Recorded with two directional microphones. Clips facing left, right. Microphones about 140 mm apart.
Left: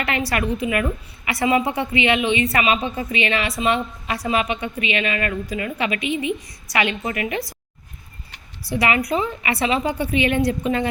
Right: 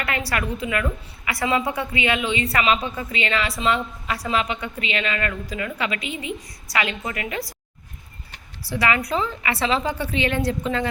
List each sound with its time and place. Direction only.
0.0 s a woman's voice: 20° left (ahead or behind)
8.7 s a woman's voice: 20° left (ahead or behind)